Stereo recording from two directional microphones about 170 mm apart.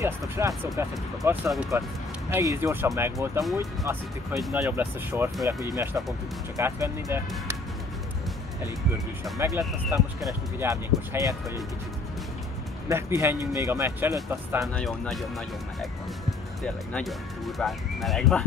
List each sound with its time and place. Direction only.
0.0 s speech: 15° right (ahead or behind)
9.6 s speech: 15° right (ahead or behind)
12.8 s speech: 15° right (ahead or behind)
14.7 s speech: 5° left (ahead or behind)